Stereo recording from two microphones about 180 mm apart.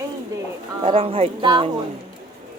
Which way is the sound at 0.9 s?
30° right (ahead or behind).